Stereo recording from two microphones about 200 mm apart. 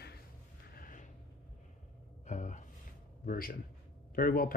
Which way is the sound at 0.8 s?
40° left (ahead or behind).